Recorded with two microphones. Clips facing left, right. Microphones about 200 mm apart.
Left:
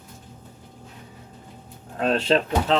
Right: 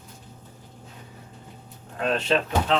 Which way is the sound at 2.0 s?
35° left (ahead or behind).